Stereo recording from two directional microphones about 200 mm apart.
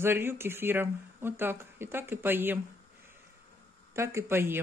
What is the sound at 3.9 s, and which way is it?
Speech, 15° right (ahead or behind).